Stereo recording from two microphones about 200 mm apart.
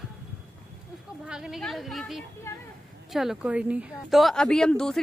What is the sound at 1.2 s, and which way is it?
Speech, centre (ahead or behind).